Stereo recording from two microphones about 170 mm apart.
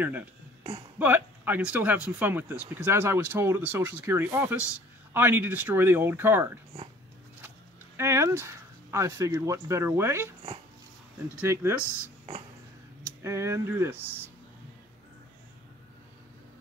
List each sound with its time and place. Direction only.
0.9 s speech: 10° right (ahead or behind)
8.0 s speech: 15° right (ahead or behind)
11.3 s speech: 15° right (ahead or behind)
13.0 s speech: 15° right (ahead or behind)